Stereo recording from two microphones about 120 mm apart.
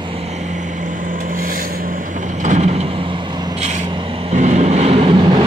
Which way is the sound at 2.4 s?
70° right (ahead or behind).